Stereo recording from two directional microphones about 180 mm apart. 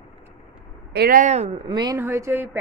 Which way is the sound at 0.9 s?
50° right (ahead or behind).